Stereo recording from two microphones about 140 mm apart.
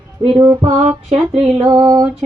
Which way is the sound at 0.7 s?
55° right (ahead or behind).